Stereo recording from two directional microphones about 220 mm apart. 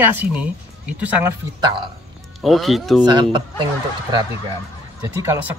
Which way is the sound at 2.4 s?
Centre (ahead or behind).